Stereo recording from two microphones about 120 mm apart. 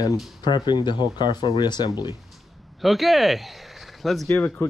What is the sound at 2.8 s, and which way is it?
Speech, centre (ahead or behind).